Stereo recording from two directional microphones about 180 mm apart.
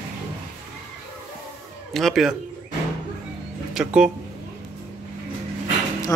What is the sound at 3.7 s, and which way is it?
Speech, 5° right (ahead or behind).